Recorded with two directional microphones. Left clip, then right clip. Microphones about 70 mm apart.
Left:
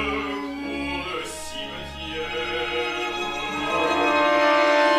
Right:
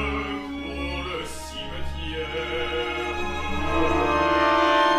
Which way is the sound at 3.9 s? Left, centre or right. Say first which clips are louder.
Left 2 dB; left.